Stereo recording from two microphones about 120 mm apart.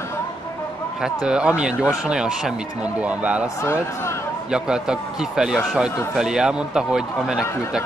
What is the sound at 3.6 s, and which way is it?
Speech, 20° left (ahead or behind).